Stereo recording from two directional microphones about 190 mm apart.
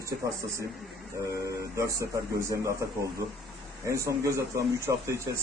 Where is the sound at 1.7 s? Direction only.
15° right (ahead or behind).